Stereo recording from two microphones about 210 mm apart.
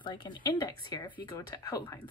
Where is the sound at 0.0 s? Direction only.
20° left (ahead or behind).